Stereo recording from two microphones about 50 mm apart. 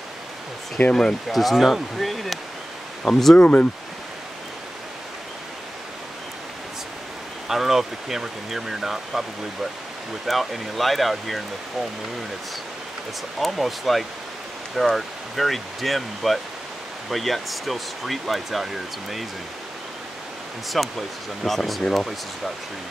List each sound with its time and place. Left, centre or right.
0.8 s speech: left
1.3 s speech: centre
3.3 s speech: left
7.4 s speech: centre
13.4 s speech: centre
20.7 s speech: centre